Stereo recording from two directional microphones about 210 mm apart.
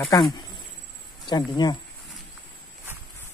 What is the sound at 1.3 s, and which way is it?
Speech, 20° left (ahead or behind).